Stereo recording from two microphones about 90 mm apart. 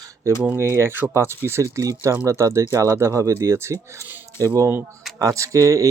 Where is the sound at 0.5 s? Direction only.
30° right (ahead or behind).